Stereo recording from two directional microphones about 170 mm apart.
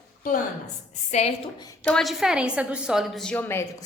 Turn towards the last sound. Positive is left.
turn(degrees=10)  # may be behind; listen again after turning